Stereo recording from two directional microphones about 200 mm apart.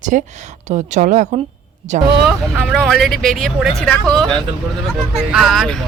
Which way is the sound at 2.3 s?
Centre (ahead or behind).